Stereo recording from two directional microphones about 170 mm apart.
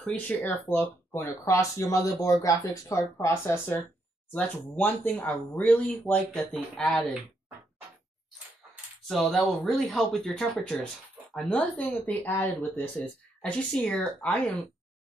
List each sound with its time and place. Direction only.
0.0 s speech: 10° left (ahead or behind)
9.0 s speech: centre (ahead or behind)